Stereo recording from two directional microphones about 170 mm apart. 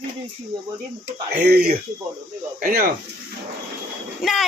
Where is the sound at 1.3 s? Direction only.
65° right (ahead or behind).